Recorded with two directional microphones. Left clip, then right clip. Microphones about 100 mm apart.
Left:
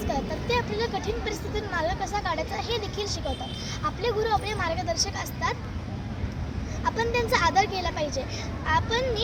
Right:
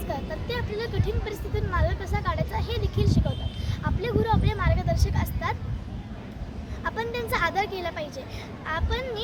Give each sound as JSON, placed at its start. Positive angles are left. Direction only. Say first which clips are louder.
{"t": 0.1, "sound": "speech", "louder": "left 4 dB", "side_deg": -45}
{"t": 6.8, "sound": "speech", "louder": "left 4 dB", "side_deg": -45}